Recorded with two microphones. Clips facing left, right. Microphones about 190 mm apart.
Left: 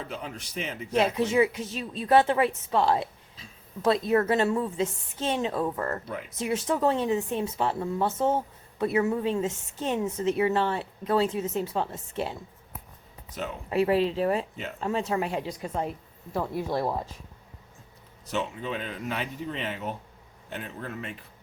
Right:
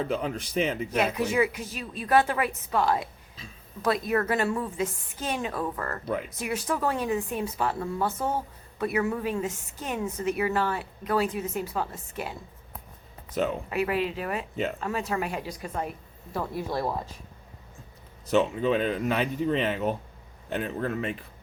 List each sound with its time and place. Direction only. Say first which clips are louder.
0.2 s a man's voice: right 8 dB; 90° right
0.9 s a woman's voice: left 3 dB; 25° left (ahead or behind)
13.7 s a woman's voice: left 4 dB; 30° left (ahead or behind)
18.3 s speech: right 8 dB; 85° right